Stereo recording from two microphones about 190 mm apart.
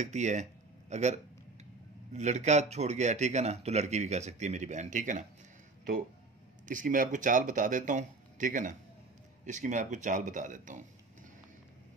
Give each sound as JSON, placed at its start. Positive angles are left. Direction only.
{"t": 0.0, "sound": "speech", "side_deg": -40}
{"t": 6.7, "sound": "speech", "side_deg": -45}